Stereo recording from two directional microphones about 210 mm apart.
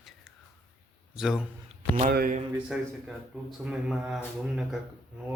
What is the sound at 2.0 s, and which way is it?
Speech, 40° right (ahead or behind).